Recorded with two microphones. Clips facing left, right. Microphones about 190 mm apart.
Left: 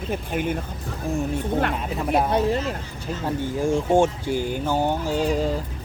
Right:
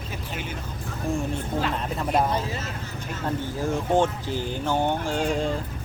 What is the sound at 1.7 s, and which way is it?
Speech, 5° left (ahead or behind).